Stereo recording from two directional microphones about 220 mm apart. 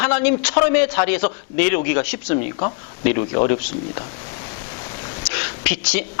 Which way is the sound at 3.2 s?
25° left (ahead or behind).